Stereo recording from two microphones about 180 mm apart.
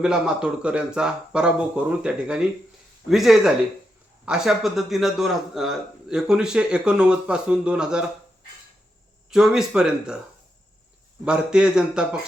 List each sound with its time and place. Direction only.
0.0 s a man's voice: 5° right (ahead or behind)
9.3 s a man's voice: 5° right (ahead or behind)
11.3 s a man's voice: 5° right (ahead or behind)